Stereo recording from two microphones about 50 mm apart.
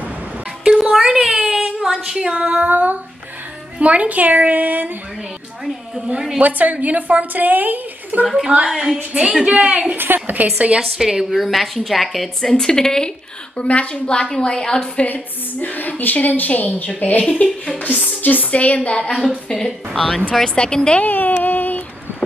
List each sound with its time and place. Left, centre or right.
0.9 s a woman's voice: centre
1.3 s a sound: centre
2.0 s a woman's voice: centre
2.3 s a woman's voice: right
5.9 s a woman's voice: centre
6.4 s a woman's voice: right
8.5 s a woman's voice: right
9.9 s a woman's voice: right
10.8 s a woman's voice: centre
13.6 s a woman's voice: left
15.1 s a woman's voice: left
19.2 s a woman's voice: centre
21.0 s a sound: left